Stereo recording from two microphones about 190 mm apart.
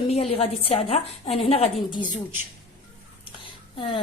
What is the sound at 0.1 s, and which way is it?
A woman's voice, 30° left (ahead or behind).